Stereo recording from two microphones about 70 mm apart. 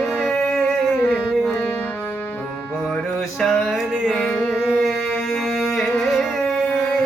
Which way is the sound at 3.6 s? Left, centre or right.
Centre.